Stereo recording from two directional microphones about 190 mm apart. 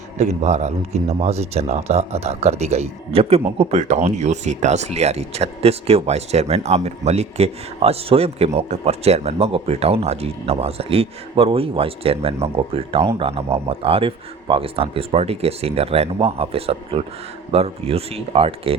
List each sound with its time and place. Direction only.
0.2 s speech: 35° right (ahead or behind)